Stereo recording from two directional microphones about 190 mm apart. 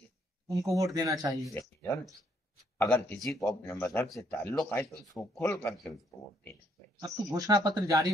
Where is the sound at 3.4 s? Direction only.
15° left (ahead or behind).